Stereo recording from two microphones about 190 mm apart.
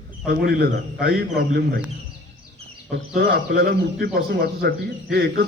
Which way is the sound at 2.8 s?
50° right (ahead or behind).